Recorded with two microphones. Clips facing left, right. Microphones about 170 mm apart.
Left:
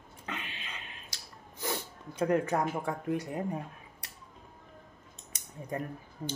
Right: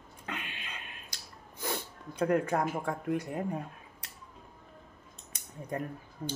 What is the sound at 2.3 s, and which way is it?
Speech, 15° left (ahead or behind).